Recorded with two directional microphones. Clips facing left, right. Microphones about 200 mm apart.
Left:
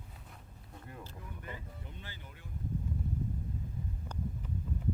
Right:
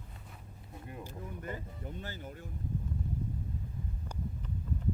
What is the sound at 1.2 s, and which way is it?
Vehicle, 45° right (ahead or behind).